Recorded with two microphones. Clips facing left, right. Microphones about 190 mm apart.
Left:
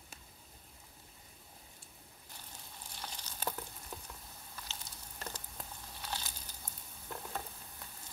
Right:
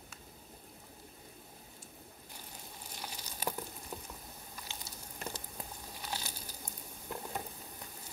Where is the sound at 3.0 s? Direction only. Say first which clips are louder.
Right 2 dB; 10° right (ahead or behind).